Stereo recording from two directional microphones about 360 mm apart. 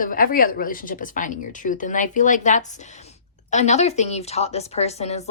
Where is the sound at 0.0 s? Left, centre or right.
Left.